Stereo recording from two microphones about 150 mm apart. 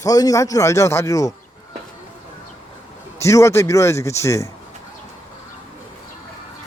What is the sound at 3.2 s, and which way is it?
A man's voice, 20° left (ahead or behind).